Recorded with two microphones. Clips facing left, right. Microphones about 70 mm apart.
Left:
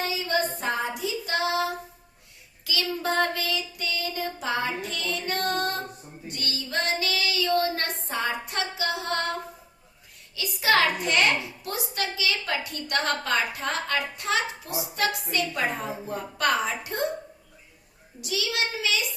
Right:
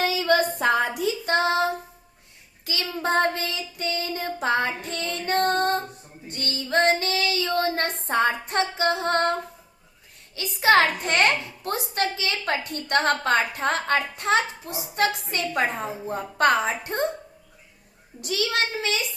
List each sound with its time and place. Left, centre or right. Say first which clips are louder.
0.0 s a sound: right 5 dB; right
0.9 s child singing: right 5 dB; right
8.0 s female singing: right 10 dB; right
10.3 s a woman's voice: right 4 dB; right
18.2 s a child's voice: right 3 dB; right